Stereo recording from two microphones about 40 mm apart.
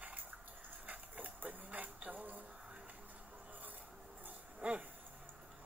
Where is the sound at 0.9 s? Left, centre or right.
Right.